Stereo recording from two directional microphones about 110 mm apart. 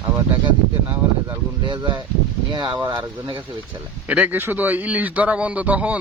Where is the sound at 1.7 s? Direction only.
45° right (ahead or behind).